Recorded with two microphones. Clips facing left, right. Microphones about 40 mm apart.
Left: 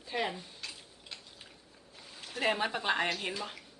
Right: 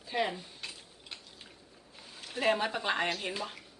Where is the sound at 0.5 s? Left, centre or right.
Centre.